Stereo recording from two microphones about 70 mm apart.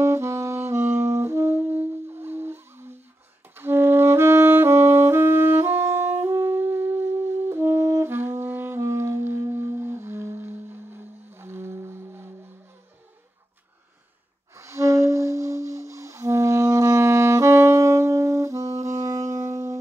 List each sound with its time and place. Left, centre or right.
0.0 s saxophone: right
8.0 s music: right
14.5 s music: right